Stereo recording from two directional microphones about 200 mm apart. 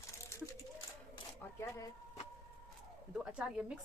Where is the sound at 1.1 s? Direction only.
15° left (ahead or behind).